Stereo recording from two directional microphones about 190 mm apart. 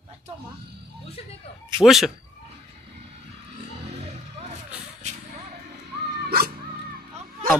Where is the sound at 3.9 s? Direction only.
35° right (ahead or behind).